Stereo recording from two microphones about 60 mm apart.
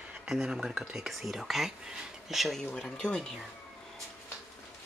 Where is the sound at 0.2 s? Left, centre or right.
Centre.